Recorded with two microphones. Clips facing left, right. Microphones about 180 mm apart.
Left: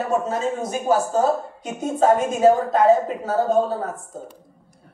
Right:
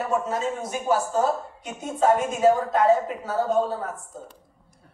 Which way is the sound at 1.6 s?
25° left (ahead or behind).